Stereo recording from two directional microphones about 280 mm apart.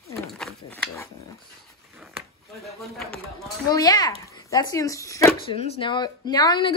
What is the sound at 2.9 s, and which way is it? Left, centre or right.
Speech, centre.